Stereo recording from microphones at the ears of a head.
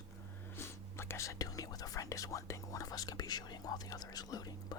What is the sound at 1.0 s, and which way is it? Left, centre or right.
Speech, left.